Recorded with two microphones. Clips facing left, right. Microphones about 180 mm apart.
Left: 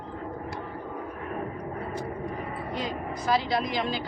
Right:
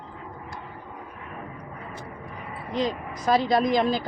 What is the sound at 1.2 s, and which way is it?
Vehicle, 40° left (ahead or behind).